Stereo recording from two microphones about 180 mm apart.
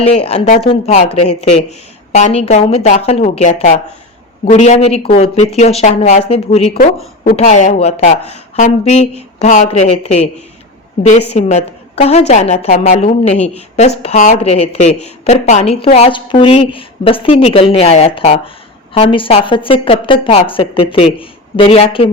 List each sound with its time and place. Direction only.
0.0 s a woman's voice: 35° left (ahead or behind)
11.3 s a woman's voice: 35° left (ahead or behind)